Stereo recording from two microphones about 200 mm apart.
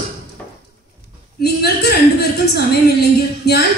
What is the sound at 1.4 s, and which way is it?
A woman's voice, 55° left (ahead or behind).